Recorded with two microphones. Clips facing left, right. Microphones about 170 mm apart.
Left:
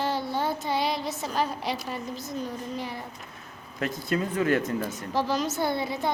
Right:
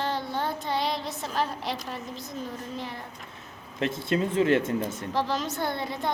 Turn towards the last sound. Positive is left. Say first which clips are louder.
# left 2 dB
turn(degrees=5)  # may be behind; listen again after turning